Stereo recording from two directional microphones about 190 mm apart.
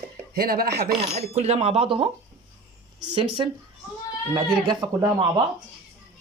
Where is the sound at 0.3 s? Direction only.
50° right (ahead or behind).